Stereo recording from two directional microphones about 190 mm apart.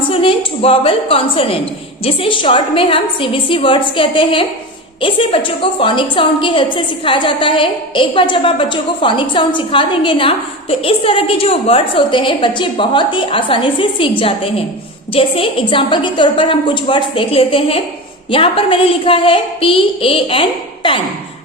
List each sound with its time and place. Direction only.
0.1 s a woman's voice: 30° left (ahead or behind)